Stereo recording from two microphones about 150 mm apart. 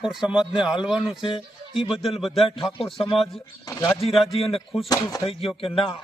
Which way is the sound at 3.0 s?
40° left (ahead or behind).